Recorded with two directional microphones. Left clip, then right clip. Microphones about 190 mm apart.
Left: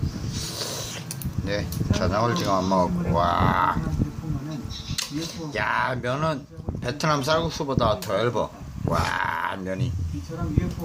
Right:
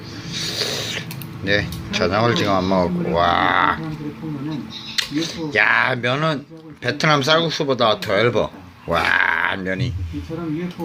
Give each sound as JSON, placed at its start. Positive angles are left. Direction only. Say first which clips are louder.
{"t": 0.3, "sound": "a sound", "louder": "right 9 dB", "side_deg": 0}
{"t": 1.5, "sound": "speech", "louder": "right 8 dB", "side_deg": 0}
{"t": 4.9, "sound": "speech", "louder": "right 9 dB", "side_deg": 0}